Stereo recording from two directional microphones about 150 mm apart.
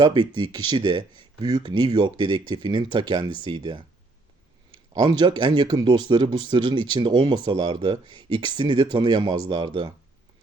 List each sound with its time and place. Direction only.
0.0 s speech: 30° right (ahead or behind)